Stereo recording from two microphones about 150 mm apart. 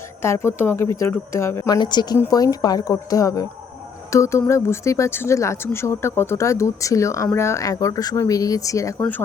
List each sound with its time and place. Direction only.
0.2 s speech: 15° left (ahead or behind)